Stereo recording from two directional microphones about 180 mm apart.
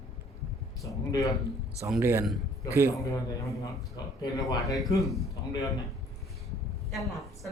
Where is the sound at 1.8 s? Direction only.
10° right (ahead or behind).